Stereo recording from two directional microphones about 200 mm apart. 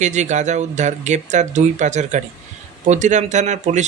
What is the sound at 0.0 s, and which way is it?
Speech, 35° right (ahead or behind).